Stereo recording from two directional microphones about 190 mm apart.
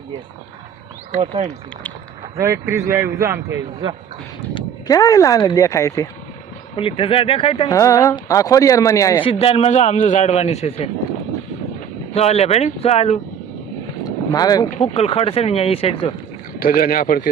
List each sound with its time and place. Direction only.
1.1 s speech: 35° right (ahead or behind)
2.4 s a man's voice: 15° right (ahead or behind)
3.8 s speech: 25° right (ahead or behind)
4.5 s speech: 20° left (ahead or behind)
6.7 s speech: 30° left (ahead or behind)
7.7 s speech: 15° left (ahead or behind)
9.2 s a man's voice: 30° left (ahead or behind)
12.1 s a man's voice: 35° left (ahead or behind)
14.0 s vehicle: 20° left (ahead or behind)
14.8 s a man's voice: 30° left (ahead or behind)
16.6 s speech: 50° left (ahead or behind)